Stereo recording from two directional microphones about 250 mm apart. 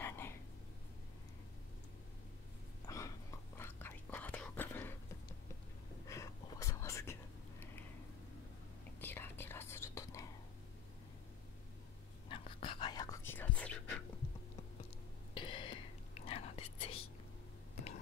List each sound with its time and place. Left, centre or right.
0.0 s a sound: centre
2.9 s whispering: centre
6.0 s whispering: centre
9.0 s whispering: centre
12.3 s whispering: left; by 13.7 s centre
15.3 s whispering: centre